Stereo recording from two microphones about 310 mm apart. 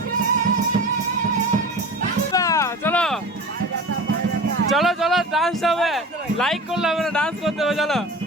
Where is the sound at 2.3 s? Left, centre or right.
Centre.